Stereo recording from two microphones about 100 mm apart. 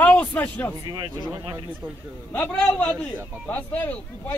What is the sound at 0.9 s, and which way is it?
Speech, 50° right (ahead or behind).